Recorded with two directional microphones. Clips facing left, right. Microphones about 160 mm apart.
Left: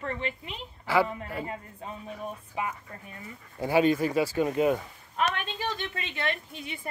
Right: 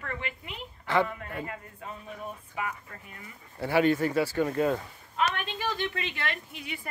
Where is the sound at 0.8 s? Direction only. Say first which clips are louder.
Left 1 dB; 5° left (ahead or behind).